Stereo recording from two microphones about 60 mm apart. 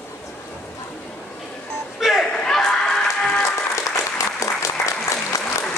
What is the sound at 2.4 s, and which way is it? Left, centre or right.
Music, centre.